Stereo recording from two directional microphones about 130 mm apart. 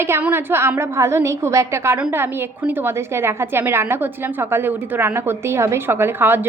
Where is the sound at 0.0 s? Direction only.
15° right (ahead or behind).